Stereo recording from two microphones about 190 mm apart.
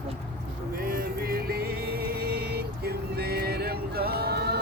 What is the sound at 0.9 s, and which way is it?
Music, 50° right (ahead or behind).